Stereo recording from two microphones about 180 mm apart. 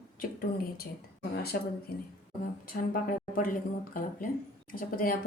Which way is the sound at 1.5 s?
55° left (ahead or behind).